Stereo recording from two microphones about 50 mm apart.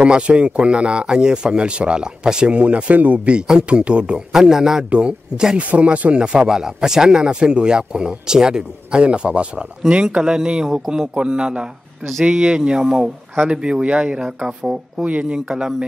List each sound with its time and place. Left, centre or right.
0.0 s speech: right
4.8 s speech: right
15.3 s speech: centre